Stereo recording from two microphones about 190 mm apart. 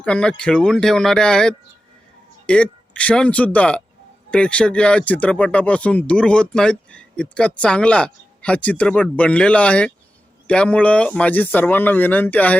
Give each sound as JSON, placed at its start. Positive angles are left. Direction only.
{"t": 0.0, "sound": "speech", "side_deg": 5}